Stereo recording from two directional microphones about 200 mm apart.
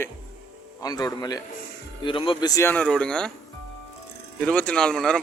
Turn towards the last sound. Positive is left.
turn(degrees=5)  # may be behind; listen again after turning